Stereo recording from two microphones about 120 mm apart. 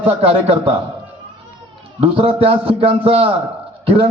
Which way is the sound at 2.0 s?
50° right (ahead or behind).